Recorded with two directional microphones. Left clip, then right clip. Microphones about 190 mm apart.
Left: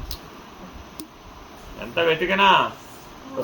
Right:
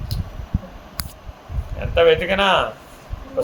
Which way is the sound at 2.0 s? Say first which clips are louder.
Right 4 dB; 60° right (ahead or behind).